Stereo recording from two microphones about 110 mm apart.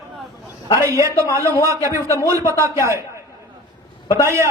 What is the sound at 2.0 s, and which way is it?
Speech, 25° left (ahead or behind).